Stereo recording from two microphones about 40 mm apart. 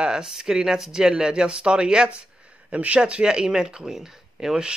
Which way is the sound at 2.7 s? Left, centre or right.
Right.